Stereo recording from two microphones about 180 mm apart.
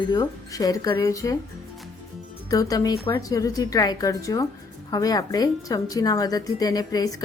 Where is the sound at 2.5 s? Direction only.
20° left (ahead or behind).